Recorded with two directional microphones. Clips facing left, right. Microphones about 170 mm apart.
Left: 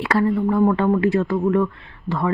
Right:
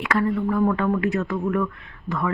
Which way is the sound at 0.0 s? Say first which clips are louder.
Left 3 dB; 30° left (ahead or behind).